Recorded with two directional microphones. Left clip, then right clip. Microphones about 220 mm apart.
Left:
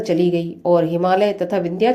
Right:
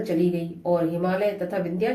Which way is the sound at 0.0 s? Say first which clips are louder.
Left 6 dB; 35° left (ahead or behind).